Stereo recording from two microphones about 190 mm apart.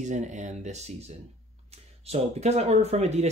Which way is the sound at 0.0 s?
40° right (ahead or behind).